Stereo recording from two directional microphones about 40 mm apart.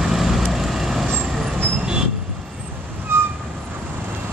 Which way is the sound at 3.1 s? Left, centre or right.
Right.